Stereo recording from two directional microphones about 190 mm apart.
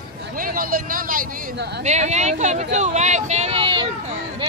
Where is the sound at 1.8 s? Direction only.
35° right (ahead or behind).